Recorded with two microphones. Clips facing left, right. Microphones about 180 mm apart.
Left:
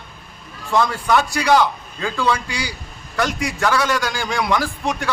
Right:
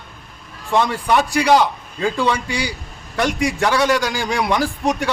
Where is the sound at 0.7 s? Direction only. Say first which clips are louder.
Right 1 dB; 15° right (ahead or behind).